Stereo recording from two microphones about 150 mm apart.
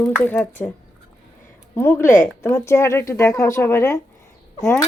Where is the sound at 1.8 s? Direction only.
15° left (ahead or behind).